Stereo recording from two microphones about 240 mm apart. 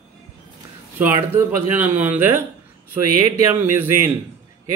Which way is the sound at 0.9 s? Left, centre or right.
Centre.